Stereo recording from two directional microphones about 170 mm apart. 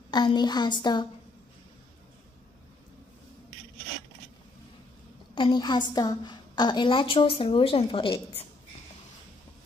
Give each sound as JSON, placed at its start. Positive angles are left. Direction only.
{"t": 0.1, "sound": "a woman's voice", "side_deg": 25}
{"t": 5.3, "sound": "a woman's voice", "side_deg": 30}